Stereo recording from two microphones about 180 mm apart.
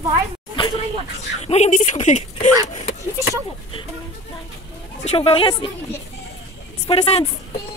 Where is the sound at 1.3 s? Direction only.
40° left (ahead or behind).